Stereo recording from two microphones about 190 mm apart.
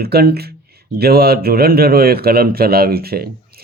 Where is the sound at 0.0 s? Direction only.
55° right (ahead or behind).